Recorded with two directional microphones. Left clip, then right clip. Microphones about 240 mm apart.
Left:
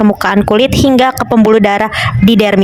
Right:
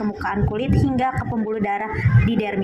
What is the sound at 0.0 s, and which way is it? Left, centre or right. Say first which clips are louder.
Speech: left 14 dB; left.